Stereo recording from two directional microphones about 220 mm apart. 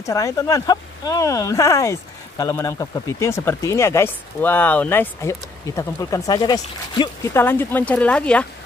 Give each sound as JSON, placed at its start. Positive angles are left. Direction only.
{"t": 0.0, "sound": "speech", "side_deg": 15}